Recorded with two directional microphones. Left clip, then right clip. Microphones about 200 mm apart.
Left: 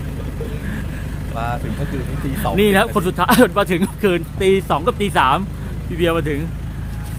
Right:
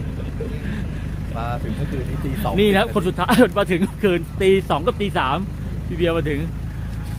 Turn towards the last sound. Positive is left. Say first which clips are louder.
# left 2 dB
turn(degrees=10)  # may be behind; listen again after turning